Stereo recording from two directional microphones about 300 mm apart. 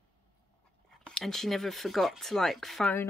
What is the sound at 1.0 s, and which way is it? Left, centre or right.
Speech, centre.